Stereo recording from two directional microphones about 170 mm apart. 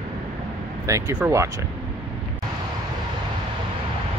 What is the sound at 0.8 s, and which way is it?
Speech, 15° right (ahead or behind).